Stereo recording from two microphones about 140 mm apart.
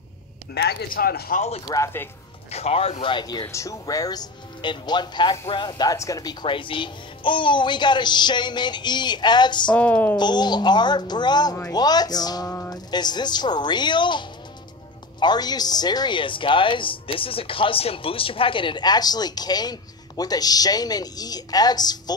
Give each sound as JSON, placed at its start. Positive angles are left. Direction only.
{"t": 0.6, "sound": "speech", "side_deg": 90}
{"t": 1.7, "sound": "speech", "side_deg": 20}
{"t": 2.5, "sound": "a woman's voice", "side_deg": 45}
{"t": 6.4, "sound": "a woman's voice", "side_deg": 35}
{"t": 9.7, "sound": "speech", "side_deg": 10}
{"t": 10.1, "sound": "a woman's voice", "side_deg": 30}